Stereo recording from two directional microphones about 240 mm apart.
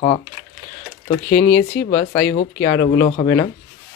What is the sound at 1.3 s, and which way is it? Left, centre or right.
Speech, left.